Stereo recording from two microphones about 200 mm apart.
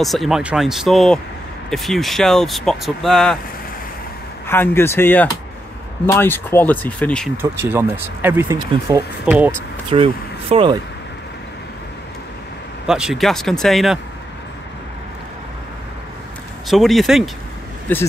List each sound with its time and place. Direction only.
0.0 s speech: centre (ahead or behind)
4.5 s speech: 10° left (ahead or behind)
7.6 s speech: 10° right (ahead or behind)
9.2 s speech: 5° right (ahead or behind)
9.8 s speech: 30° right (ahead or behind)
12.8 s speech: 5° right (ahead or behind)
16.6 s speech: centre (ahead or behind)